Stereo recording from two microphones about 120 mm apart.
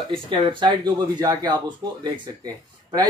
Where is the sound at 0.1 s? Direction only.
45° right (ahead or behind).